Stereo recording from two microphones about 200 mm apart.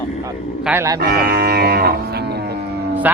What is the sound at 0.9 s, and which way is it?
Cattle, 50° right (ahead or behind).